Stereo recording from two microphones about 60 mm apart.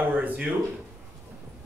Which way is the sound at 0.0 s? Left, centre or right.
Right.